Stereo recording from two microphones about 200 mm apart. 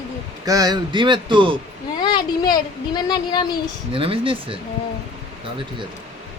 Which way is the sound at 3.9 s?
25° right (ahead or behind).